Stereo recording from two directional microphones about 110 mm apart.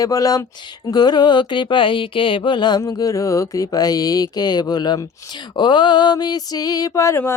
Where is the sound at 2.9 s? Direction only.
30° left (ahead or behind).